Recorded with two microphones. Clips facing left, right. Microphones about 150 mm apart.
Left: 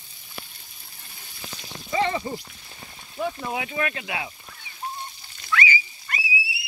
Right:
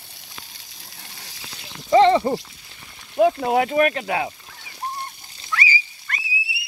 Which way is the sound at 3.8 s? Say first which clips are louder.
Right 8 dB; 35° right (ahead or behind).